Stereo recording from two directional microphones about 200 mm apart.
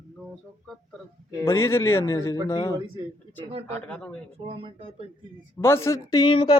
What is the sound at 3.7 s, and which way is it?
Speech, 5° left (ahead or behind).